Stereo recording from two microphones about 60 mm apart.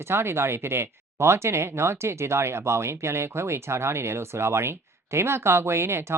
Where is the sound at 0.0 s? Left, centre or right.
Right.